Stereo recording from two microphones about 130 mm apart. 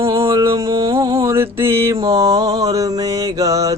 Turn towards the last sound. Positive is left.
turn(degrees=-25)  # may be behind; listen again after turning